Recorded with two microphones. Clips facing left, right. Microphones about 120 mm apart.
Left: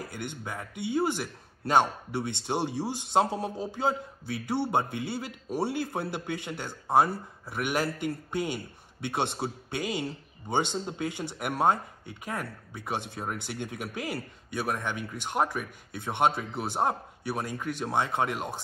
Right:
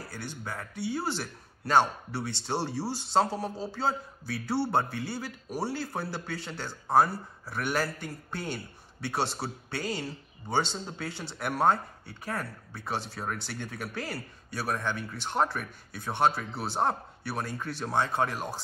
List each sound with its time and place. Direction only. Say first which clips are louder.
0.1 s a man's voice: left 2 dB; 20° left (ahead or behind)